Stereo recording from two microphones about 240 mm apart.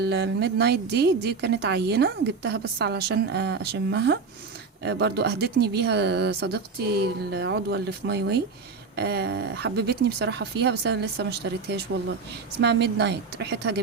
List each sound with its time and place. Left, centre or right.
0.0 s a woman's voice: right